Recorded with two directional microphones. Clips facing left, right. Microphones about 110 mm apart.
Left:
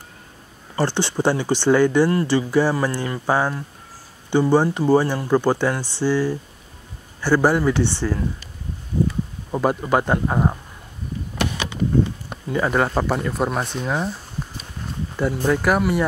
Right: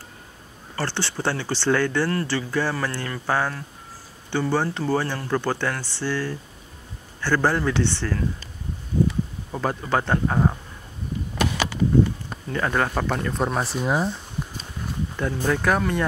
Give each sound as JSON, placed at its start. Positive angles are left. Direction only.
{"t": 0.7, "sound": "speech", "side_deg": 15}
{"t": 9.5, "sound": "speech", "side_deg": 15}
{"t": 12.4, "sound": "speech", "side_deg": 10}
{"t": 15.1, "sound": "speech", "side_deg": 10}